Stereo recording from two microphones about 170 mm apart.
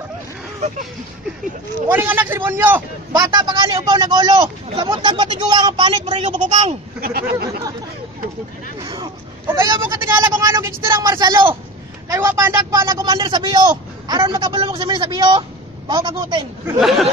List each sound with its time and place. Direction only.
1.9 s speech: 10° right (ahead or behind)
3.1 s speech: 25° right (ahead or behind)
6.2 s a woman's voice: 45° right (ahead or behind)
7.0 s speech: 60° right (ahead or behind)
8.8 s speech: 25° right (ahead or behind)
9.5 s speech: 15° right (ahead or behind)
16.8 s speech: centre (ahead or behind)